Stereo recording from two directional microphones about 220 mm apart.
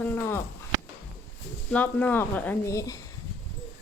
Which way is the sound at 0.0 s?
10° left (ahead or behind).